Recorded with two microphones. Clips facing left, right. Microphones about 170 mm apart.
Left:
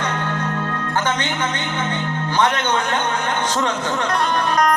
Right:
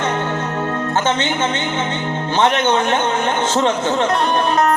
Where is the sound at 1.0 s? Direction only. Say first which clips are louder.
Right 4 dB; 25° right (ahead or behind).